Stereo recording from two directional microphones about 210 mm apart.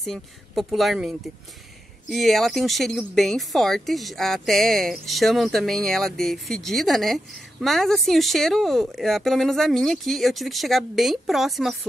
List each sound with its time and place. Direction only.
0.0 s speech: centre (ahead or behind)